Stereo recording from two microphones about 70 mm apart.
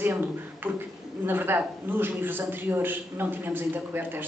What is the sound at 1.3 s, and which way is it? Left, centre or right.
A woman's voice, right.